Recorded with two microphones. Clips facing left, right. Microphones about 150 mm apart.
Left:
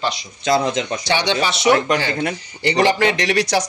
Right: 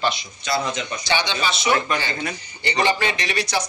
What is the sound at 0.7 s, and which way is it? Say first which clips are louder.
Speech: left 4 dB; 85° left.